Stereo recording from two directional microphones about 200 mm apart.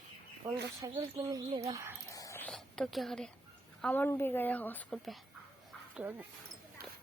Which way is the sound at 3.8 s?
10° left (ahead or behind).